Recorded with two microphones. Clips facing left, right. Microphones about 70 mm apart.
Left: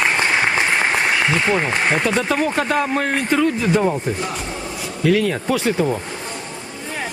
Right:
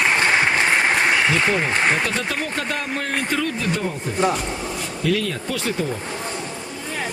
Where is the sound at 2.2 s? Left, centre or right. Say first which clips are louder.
Left 6 dB; centre.